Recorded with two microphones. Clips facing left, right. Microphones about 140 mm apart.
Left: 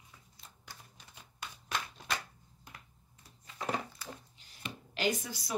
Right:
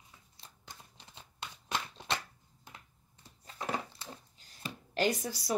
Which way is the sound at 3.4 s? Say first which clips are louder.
Left 1 dB; 30° right (ahead or behind).